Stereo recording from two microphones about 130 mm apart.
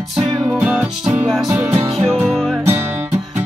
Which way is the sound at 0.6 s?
10° right (ahead or behind).